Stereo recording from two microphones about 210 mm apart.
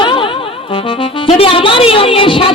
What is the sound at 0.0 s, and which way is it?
Music, 25° left (ahead or behind).